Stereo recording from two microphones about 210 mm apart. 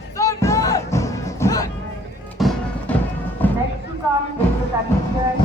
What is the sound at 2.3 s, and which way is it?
Music, centre (ahead or behind).